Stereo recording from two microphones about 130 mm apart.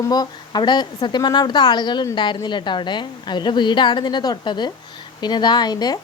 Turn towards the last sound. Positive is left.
turn(degrees=30)  # may be behind; listen again after turning